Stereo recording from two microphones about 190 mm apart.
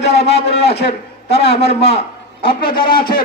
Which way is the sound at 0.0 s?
35° left (ahead or behind).